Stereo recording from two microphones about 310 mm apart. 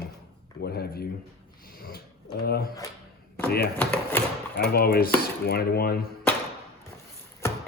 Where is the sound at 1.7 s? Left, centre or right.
Left.